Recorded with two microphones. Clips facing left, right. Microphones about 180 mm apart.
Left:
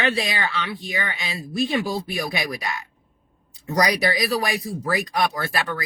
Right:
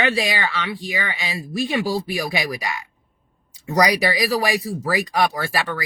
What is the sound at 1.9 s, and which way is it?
Speech, 10° right (ahead or behind).